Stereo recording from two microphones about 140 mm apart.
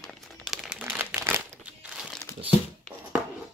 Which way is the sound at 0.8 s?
15° right (ahead or behind).